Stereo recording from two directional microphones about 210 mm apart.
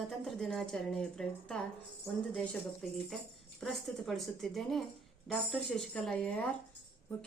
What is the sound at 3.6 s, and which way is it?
Child singing, centre (ahead or behind).